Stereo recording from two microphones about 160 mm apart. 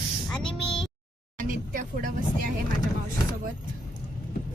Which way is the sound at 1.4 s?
60° right (ahead or behind).